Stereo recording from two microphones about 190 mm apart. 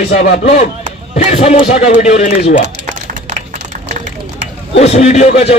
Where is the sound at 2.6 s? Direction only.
35° right (ahead or behind).